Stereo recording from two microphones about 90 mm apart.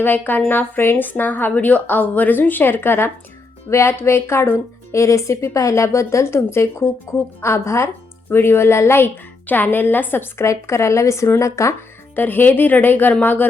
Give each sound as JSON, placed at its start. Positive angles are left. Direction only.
{"t": 0.0, "sound": "a woman's voice", "side_deg": 20}
{"t": 12.1, "sound": "speech", "side_deg": 20}